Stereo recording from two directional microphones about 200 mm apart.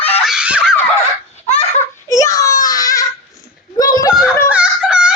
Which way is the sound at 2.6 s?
20° left (ahead or behind).